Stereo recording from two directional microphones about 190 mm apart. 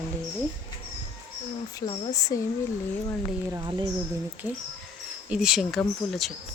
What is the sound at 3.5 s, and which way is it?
Speech, 20° right (ahead or behind).